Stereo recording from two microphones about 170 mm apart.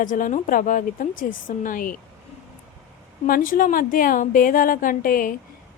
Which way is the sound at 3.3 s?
55° left (ahead or behind).